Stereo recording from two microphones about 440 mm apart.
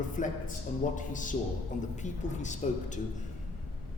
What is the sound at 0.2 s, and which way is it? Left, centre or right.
A man's voice, centre.